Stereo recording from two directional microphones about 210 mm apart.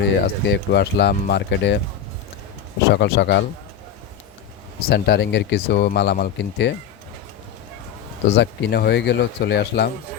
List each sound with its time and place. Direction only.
0.0 s speech: 55° left (ahead or behind)
2.9 s speech: 55° left (ahead or behind)
4.9 s speech: 50° left (ahead or behind)
8.4 s speech: 55° left (ahead or behind)